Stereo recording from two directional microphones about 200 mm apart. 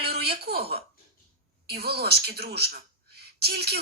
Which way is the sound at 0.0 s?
55° right (ahead or behind).